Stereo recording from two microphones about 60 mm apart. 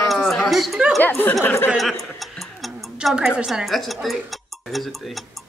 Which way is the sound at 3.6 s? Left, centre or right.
Centre.